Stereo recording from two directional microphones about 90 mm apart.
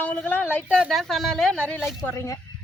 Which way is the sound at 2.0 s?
35° left (ahead or behind).